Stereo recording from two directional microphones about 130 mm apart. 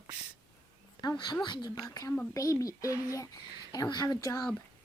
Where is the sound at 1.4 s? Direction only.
35° left (ahead or behind).